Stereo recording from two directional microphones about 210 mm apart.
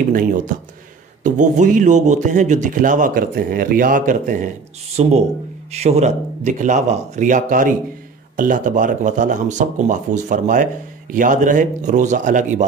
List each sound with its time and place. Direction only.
1.2 s speech: 35° right (ahead or behind)